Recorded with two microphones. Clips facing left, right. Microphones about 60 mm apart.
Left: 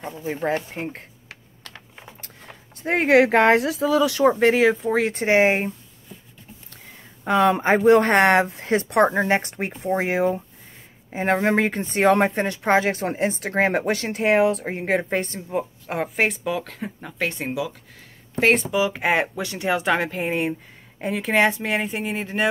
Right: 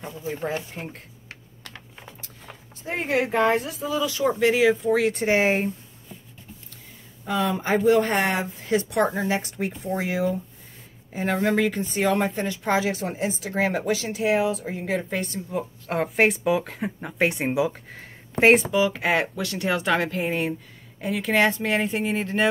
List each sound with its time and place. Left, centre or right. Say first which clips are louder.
0.0 s speech: left 4 dB; left
2.8 s speech: left 8 dB; left
4.3 s speech: even; left
4.8 s speech: even; left
7.2 s speech: left 6 dB; left
8.5 s speech: left 4 dB; left
15.9 s speech: right 2 dB; centre; by 17.7 s right
18.6 s speech: even; centre
18.9 s speech: left 2 dB; centre
21.3 s speech: left 1 dB; centre